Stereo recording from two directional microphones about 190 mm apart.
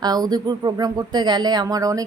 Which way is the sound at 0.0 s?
20° right (ahead or behind).